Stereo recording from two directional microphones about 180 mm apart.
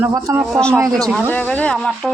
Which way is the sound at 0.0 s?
15° right (ahead or behind).